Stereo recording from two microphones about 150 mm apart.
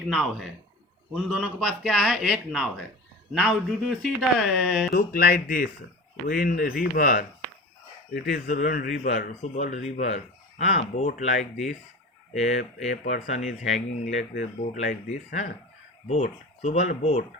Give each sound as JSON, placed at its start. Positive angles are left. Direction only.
{"t": 0.1, "sound": "a man's voice", "side_deg": 0}
{"t": 4.9, "sound": "speech", "side_deg": 85}
{"t": 9.0, "sound": "speech", "side_deg": 50}